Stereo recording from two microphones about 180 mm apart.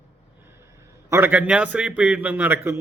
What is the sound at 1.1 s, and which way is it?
Speech, 10° right (ahead or behind).